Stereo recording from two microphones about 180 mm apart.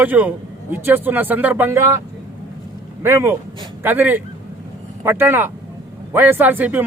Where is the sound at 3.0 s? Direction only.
15° right (ahead or behind).